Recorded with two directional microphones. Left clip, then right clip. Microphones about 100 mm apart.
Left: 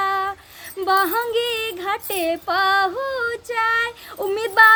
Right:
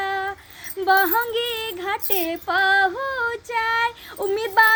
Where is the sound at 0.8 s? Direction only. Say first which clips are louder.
Even; 25° left (ahead or behind).